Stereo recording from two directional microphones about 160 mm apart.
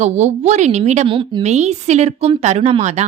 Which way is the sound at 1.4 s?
45° right (ahead or behind).